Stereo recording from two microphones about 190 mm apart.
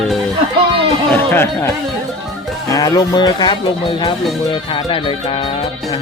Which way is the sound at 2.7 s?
20° left (ahead or behind).